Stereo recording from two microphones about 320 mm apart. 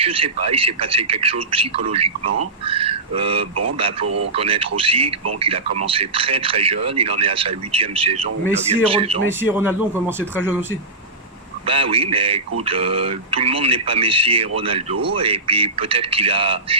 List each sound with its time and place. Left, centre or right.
0.0 s speech: centre
2.6 s a sound: centre
4.0 s speech: right
4.4 s speech: centre
9.4 s a man's voice: centre